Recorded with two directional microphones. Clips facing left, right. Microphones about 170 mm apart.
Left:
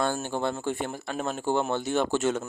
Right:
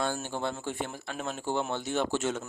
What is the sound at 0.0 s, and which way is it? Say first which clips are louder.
A man's voice: left 4 dB; 55° left (ahead or behind).